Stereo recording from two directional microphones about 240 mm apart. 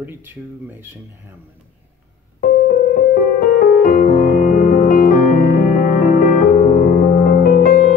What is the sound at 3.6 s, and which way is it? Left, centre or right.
Music, left.